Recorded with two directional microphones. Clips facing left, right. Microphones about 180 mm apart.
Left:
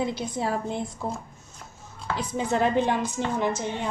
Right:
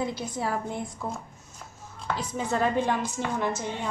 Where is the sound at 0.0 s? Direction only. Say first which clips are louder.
Left 2 dB; 25° left (ahead or behind).